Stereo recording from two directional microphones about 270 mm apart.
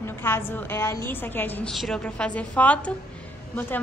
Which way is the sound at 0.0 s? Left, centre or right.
Centre.